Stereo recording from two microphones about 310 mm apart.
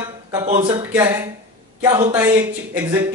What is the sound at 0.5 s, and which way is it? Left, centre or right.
Speech, centre.